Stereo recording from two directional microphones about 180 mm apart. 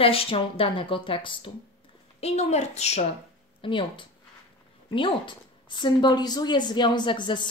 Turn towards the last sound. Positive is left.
turn(degrees=25)  # may be behind; listen again after turning